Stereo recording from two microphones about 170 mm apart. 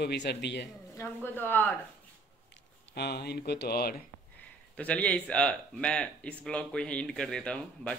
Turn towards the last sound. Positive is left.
turn(degrees=5)  # may be behind; listen again after turning